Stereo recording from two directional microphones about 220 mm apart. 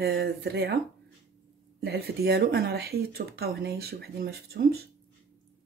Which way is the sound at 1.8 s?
45° right (ahead or behind).